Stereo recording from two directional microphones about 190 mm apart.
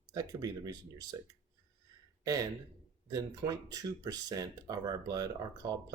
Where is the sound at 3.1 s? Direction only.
20° right (ahead or behind).